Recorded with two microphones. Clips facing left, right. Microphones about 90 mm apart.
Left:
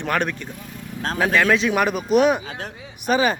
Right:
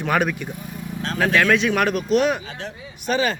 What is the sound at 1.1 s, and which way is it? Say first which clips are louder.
Speech: even; 5° left (ahead or behind).